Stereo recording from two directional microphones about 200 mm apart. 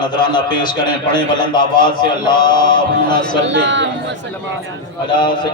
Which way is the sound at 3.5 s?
65° right (ahead or behind).